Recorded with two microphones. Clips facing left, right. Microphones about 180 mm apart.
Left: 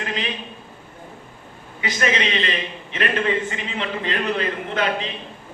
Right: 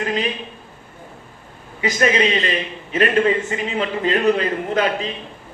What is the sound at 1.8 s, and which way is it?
Speech, 45° right (ahead or behind).